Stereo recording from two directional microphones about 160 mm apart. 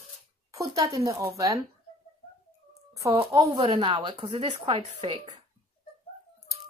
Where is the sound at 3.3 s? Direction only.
25° right (ahead or behind).